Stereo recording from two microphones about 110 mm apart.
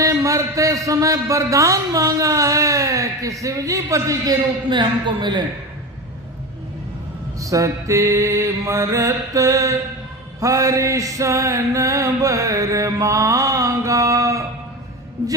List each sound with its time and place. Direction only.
0.0 s speech: 30° right (ahead or behind)
4.7 s a man's voice: 45° right (ahead or behind)
7.3 s speech: 30° right (ahead or behind)